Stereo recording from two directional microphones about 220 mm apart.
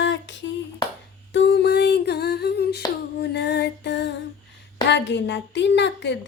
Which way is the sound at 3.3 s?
50° left (ahead or behind).